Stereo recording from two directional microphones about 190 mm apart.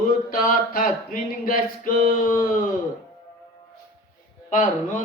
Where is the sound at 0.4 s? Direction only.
50° left (ahead or behind).